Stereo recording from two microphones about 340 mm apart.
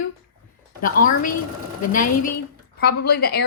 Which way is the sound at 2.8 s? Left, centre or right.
Left.